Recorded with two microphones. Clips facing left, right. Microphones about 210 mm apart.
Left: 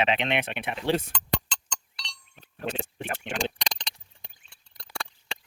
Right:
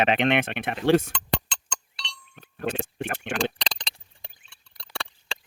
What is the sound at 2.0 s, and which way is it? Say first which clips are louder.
Chink: right 5 dB; 55° right (ahead or behind).